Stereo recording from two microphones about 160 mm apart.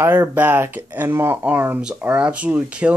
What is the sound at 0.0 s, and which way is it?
Speech, 15° right (ahead or behind).